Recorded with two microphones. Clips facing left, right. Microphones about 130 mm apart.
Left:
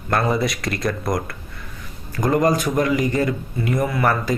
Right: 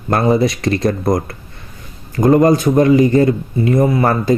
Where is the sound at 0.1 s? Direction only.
25° right (ahead or behind).